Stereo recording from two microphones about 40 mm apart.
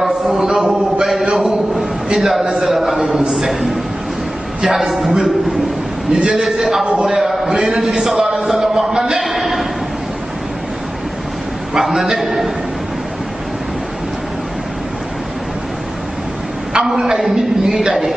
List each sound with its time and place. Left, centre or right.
0.3 s a man's voice: centre
1.2 s a man's voice: right
2.1 s a man's voice: centre
6.2 s a man's voice: centre
6.8 s a man's voice: centre
9.2 s a sound: centre
11.7 s a man's voice: centre
16.7 s a man's voice: centre